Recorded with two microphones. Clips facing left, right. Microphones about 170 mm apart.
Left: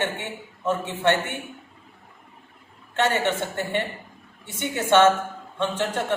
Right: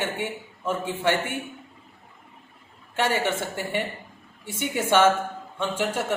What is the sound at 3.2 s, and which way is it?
Speech, 10° right (ahead or behind).